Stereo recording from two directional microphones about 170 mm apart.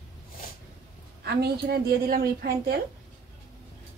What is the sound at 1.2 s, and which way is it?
A woman's voice, 70° right (ahead or behind).